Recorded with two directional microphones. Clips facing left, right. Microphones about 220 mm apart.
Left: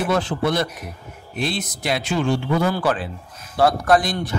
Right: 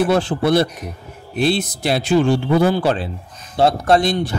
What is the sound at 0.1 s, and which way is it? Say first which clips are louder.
A man's voice: right 5 dB; 30° right (ahead or behind).